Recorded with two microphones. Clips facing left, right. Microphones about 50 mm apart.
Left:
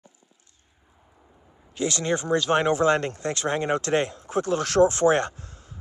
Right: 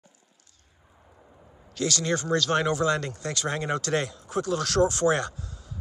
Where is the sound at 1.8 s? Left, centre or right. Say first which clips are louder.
Left 1 dB; left.